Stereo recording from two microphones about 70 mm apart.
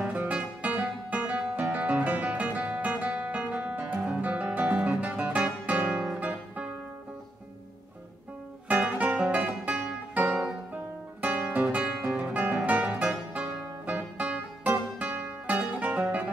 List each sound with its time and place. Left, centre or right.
0.0 s music: centre
8.9 s music: centre